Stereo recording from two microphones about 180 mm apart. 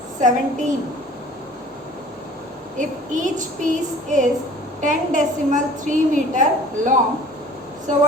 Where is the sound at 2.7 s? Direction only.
45° right (ahead or behind).